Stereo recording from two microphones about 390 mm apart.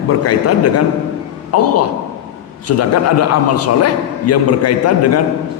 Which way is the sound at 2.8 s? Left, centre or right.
Left.